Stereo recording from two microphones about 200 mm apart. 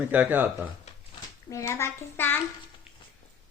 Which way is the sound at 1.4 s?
15° left (ahead or behind).